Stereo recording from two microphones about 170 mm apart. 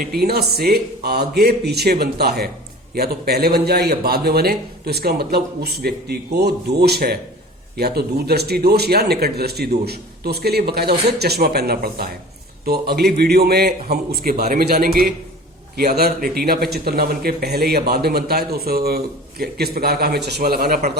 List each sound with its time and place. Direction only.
0.0 s a man's voice: 65° right (ahead or behind)